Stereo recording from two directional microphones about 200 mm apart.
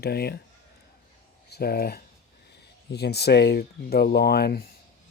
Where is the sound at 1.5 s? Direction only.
50° left (ahead or behind).